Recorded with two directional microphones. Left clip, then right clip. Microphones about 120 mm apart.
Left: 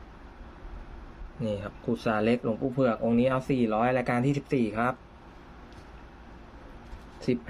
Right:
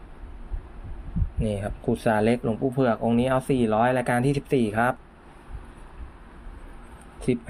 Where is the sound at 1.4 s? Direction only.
35° right (ahead or behind).